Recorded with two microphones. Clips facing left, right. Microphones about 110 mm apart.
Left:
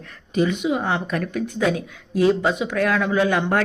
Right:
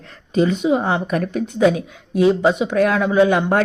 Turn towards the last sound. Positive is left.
turn(degrees=-20)  # may be behind; listen again after turning